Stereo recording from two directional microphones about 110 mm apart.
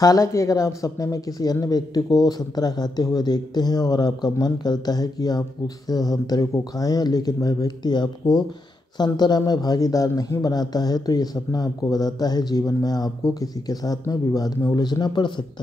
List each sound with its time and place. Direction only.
0.0 s a man's voice: 30° left (ahead or behind)